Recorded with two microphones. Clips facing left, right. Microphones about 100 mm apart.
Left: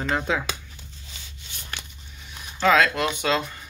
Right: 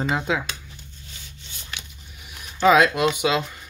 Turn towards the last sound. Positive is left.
turn(degrees=-5)  # may be behind; listen again after turning